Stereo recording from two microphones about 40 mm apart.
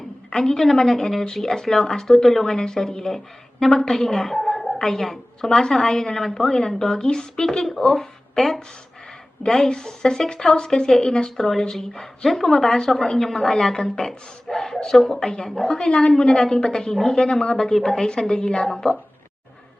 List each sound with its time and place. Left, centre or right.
0.3 s a woman's voice: centre
2.5 s a woman's voice: centre
4.4 s a sound: centre
4.9 s a woman's voice: centre
9.4 s a woman's voice: centre
11.3 s a woman's voice: centre
15.2 s a woman's voice: centre